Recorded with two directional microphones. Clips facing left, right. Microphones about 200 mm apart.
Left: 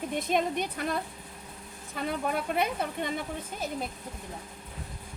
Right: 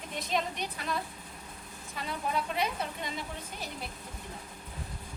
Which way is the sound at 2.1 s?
55° left (ahead or behind).